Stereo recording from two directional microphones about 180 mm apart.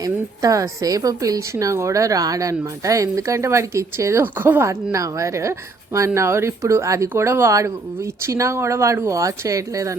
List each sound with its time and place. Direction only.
0.0 s a woman's voice: 20° right (ahead or behind)